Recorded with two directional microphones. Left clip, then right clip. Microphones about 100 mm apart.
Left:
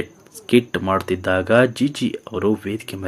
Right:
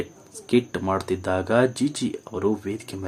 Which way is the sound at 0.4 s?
25° left (ahead or behind).